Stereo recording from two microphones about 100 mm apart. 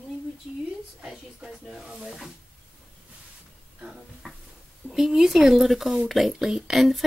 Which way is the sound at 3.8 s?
5° right (ahead or behind).